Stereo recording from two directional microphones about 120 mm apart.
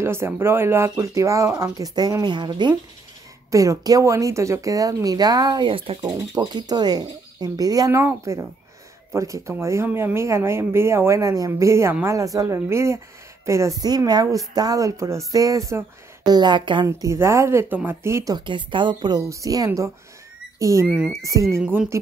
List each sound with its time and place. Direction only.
0.0 s speech: 20° right (ahead or behind)
2.0 s speech: 35° right (ahead or behind)
3.5 s speech: 30° right (ahead or behind); by 5.9 s 45° right (ahead or behind)
5.9 s speech: 35° right (ahead or behind)
16.8 s speech: 25° right (ahead or behind)
18.3 s speech: 40° right (ahead or behind)
20.8 s speech: 10° right (ahead or behind)
21.2 s speech: 25° right (ahead or behind)